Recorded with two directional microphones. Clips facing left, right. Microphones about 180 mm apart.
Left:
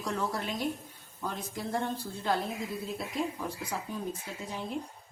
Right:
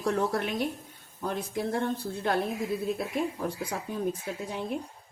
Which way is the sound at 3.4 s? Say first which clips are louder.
Right 4 dB; 55° right (ahead or behind).